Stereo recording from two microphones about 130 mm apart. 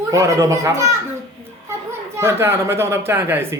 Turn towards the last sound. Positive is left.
turn(degrees=-15)  # may be behind; listen again after turning